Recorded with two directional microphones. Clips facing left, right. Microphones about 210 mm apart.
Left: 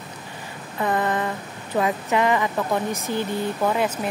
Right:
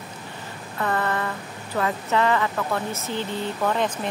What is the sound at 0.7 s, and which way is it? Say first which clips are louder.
Speech: left 2 dB; 15° left (ahead or behind).